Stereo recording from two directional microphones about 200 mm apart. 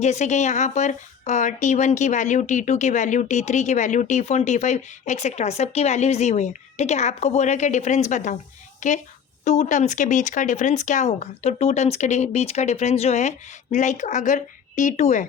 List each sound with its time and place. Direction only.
0.0 s a woman's voice: 35° left (ahead or behind)